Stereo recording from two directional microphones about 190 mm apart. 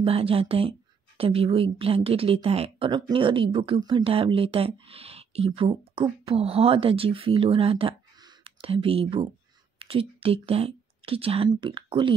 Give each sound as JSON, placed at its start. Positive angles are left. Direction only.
{"t": 0.0, "sound": "speech", "side_deg": -30}